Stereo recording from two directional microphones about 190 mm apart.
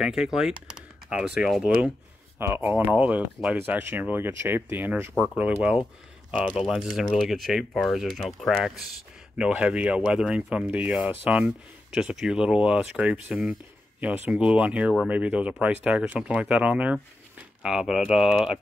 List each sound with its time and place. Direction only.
0.0 s speech: 5° right (ahead or behind)